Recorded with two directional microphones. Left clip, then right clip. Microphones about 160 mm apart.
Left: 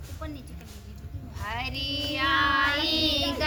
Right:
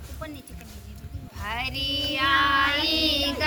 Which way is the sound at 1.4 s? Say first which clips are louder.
Right 3 dB; 20° left (ahead or behind).